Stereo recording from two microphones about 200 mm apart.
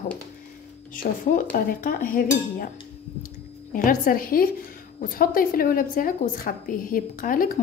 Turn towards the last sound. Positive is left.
turn(degrees=45)  # may be behind; listen again after turning